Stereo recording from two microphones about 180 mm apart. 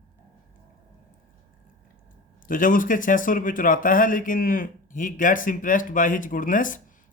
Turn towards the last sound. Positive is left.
turn(degrees=45)  # may be behind; listen again after turning